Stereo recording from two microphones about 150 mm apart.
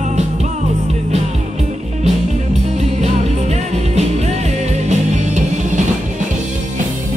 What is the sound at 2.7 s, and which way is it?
Music, 45° right (ahead or behind).